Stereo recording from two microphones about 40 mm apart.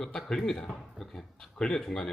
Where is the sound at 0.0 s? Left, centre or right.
Centre.